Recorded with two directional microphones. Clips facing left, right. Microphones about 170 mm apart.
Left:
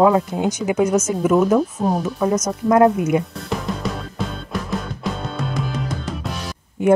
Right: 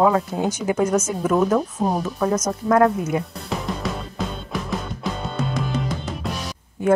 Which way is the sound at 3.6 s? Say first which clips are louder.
Left 1 dB; centre (ahead or behind).